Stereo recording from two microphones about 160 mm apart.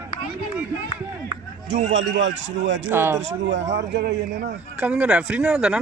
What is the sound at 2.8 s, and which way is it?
Speech, 15° right (ahead or behind).